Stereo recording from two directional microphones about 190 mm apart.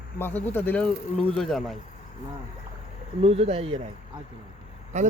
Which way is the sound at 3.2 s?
30° right (ahead or behind).